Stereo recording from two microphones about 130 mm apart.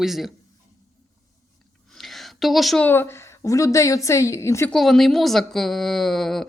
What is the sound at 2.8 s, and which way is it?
A woman's voice, 15° left (ahead or behind).